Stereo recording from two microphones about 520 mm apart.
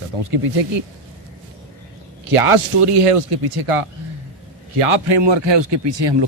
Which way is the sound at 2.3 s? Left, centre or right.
Right.